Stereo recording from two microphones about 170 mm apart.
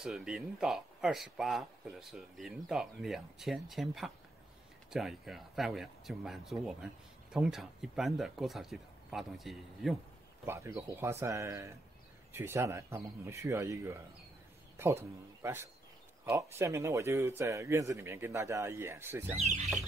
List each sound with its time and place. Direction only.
0.0 s speech: 5° right (ahead or behind)
10.4 s a man's voice: 15° right (ahead or behind)